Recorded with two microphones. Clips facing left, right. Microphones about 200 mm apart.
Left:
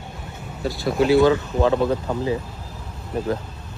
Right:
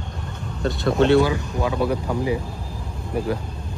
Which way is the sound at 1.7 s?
20° left (ahead or behind).